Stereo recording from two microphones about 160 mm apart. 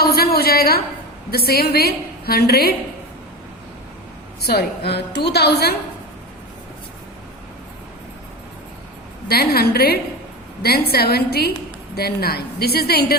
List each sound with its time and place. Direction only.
0.0 s a woman's voice: 75° left (ahead or behind)
4.4 s a woman's voice: 85° left
9.2 s a woman's voice: 75° left (ahead or behind)